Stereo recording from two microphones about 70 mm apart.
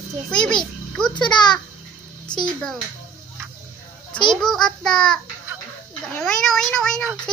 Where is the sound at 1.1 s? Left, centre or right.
Left.